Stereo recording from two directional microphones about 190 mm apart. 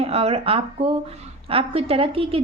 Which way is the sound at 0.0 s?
30° right (ahead or behind).